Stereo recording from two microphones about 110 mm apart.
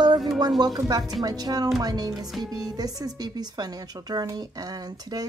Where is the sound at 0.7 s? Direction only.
35° right (ahead or behind).